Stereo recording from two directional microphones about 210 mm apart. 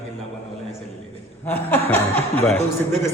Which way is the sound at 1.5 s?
10° left (ahead or behind).